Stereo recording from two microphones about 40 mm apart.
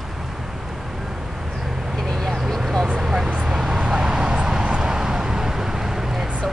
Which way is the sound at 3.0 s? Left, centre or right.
Centre.